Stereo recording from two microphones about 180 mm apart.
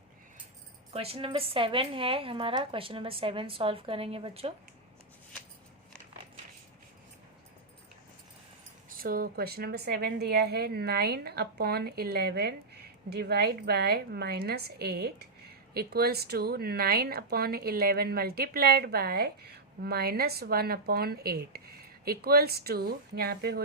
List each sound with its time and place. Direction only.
0.9 s speech: 35° right (ahead or behind)
8.9 s speech: 55° right (ahead or behind)